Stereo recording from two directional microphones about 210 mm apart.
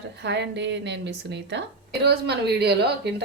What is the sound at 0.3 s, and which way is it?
A woman's voice, 55° right (ahead or behind).